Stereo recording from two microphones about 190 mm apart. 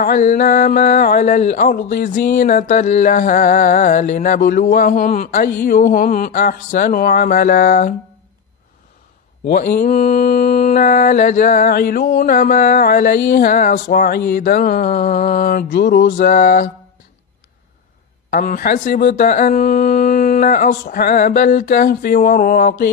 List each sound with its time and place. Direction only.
0.0 s speech: 40° left (ahead or behind)
9.5 s mantra: 45° left (ahead or behind)
10.3 s speech: 50° left (ahead or behind)
18.3 s speech: 50° left (ahead or behind)